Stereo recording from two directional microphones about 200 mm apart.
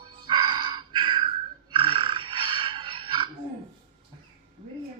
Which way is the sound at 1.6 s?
25° right (ahead or behind).